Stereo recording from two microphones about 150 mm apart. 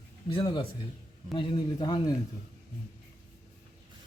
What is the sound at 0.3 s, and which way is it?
A man's voice, 30° left (ahead or behind).